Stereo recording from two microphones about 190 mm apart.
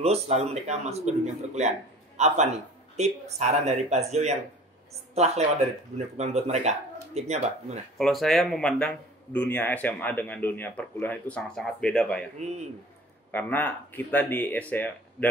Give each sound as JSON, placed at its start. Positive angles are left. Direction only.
{"t": 0.0, "sound": "speech", "side_deg": -35}
{"t": 8.0, "sound": "a man's voice", "side_deg": 0}
{"t": 12.4, "sound": "speech", "side_deg": -35}
{"t": 13.3, "sound": "a man's voice", "side_deg": 10}